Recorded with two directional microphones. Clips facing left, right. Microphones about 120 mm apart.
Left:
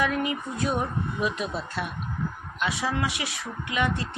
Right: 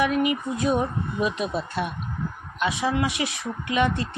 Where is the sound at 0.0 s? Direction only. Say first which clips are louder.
Right 4 dB; 15° right (ahead or behind).